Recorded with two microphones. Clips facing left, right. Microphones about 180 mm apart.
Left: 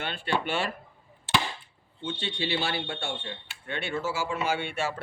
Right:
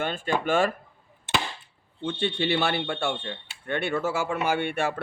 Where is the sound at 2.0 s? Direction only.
60° right (ahead or behind).